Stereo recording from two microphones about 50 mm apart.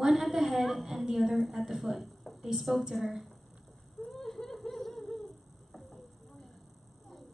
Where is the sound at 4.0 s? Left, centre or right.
Centre.